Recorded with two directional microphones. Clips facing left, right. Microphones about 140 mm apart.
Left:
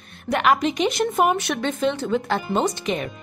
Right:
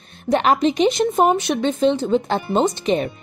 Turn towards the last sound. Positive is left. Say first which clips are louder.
# right 5 dB
turn(degrees=-30)  # may be behind; listen again after turning